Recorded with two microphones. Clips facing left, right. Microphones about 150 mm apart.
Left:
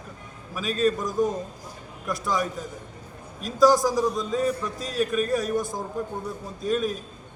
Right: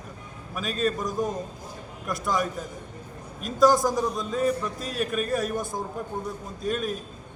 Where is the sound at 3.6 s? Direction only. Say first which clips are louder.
Left 1 dB; centre (ahead or behind).